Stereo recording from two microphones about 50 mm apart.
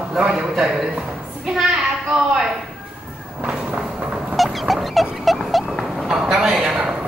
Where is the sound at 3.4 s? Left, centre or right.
Right.